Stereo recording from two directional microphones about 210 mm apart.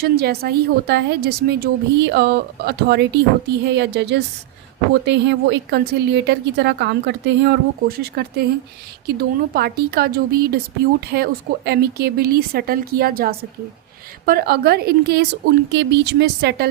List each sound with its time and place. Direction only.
0.0 s a woman's voice: 50° right (ahead or behind)
9.6 s a woman's voice: 45° right (ahead or behind)